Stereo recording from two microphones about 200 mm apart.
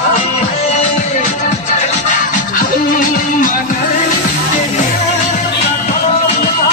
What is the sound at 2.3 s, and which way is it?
Music, 45° left (ahead or behind).